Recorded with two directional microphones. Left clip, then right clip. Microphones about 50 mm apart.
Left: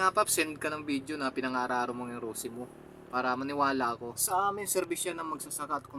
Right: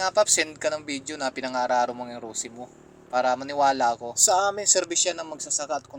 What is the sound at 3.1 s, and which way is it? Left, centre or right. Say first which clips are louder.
Speech: right 8 dB; right.